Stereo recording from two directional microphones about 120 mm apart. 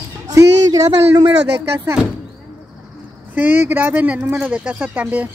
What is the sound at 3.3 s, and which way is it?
Speech, 15° right (ahead or behind).